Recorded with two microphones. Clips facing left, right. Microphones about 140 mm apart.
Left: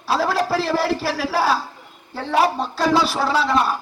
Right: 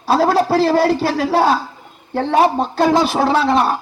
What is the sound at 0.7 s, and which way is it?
Speech, 25° right (ahead or behind).